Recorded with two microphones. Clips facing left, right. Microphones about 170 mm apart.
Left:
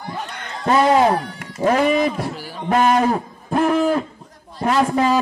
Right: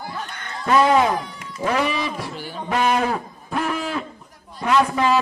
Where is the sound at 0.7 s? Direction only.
30° left (ahead or behind).